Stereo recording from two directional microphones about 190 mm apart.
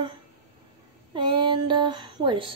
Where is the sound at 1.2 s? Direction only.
25° right (ahead or behind).